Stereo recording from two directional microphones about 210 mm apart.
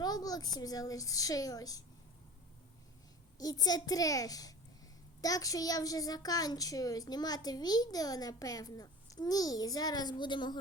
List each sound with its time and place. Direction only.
0.0 s a child's voice: 20° left (ahead or behind)
3.3 s a child's voice: 20° left (ahead or behind)